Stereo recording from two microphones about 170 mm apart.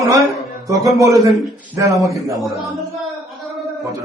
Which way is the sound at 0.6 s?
20° right (ahead or behind).